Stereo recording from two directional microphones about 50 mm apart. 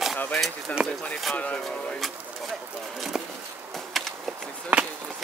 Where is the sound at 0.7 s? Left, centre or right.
Left.